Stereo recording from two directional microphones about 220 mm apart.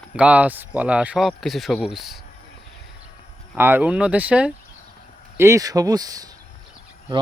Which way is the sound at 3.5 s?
10° right (ahead or behind).